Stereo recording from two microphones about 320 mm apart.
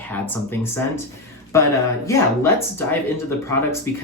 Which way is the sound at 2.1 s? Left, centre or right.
Centre.